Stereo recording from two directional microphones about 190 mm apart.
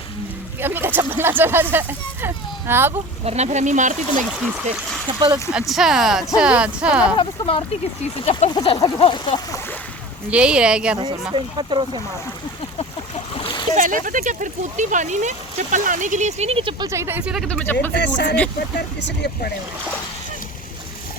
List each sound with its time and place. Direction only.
0.6 s speech: 10° right (ahead or behind)
3.2 s speech: 35° right (ahead or behind)
5.5 s speech: centre (ahead or behind)
7.2 s a sound: 30° left (ahead or behind)
10.2 s speech: 5° right (ahead or behind)
11.3 s speech: 25° right (ahead or behind)
13.1 s splash: 30° left (ahead or behind)
13.7 s speech: 45° right (ahead or behind); by 16.9 s 30° right (ahead or behind)
16.9 s speech: 15° right (ahead or behind); by 17.9 s 5° left (ahead or behind)
17.9 s speech: 65° left (ahead or behind)